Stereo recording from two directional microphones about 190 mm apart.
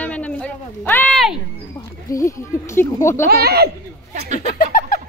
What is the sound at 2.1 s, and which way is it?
A woman's voice, 15° left (ahead or behind).